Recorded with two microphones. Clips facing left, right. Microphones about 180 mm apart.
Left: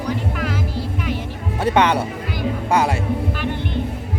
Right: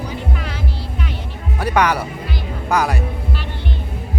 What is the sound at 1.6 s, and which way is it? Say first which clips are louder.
Speech: left 1 dB; 25° left (ahead or behind).